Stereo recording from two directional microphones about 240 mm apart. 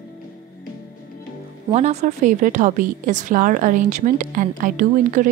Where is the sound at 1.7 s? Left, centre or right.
Right.